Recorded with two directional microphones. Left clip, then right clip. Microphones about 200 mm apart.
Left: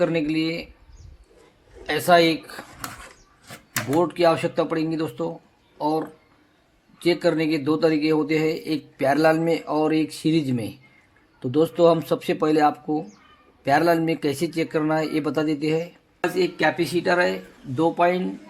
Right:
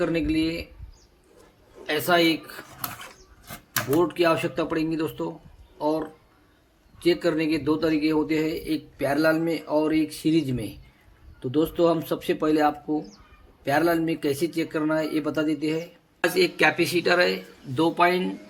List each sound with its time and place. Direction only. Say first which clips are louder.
0.0 s speech: left 2 dB; 35° left (ahead or behind)
1.9 s a man's voice: left 4 dB; 45° left (ahead or behind)
4.0 s a man's voice: left 4 dB; 40° left (ahead or behind)
16.4 s speech: right 1 dB; 30° left (ahead or behind)
17.7 s speech: left 1 dB; 30° left (ahead or behind)